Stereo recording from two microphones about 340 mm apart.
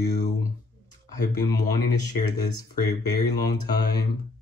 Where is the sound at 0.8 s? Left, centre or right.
Left.